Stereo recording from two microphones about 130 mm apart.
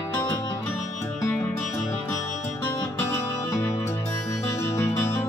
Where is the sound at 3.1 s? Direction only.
20° left (ahead or behind).